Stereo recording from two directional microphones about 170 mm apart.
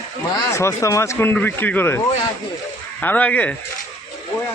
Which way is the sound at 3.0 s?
10° left (ahead or behind).